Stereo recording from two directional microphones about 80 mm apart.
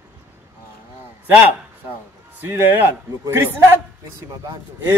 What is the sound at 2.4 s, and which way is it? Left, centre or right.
A man's voice, right.